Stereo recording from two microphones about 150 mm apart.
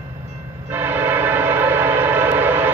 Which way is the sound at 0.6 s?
15° right (ahead or behind).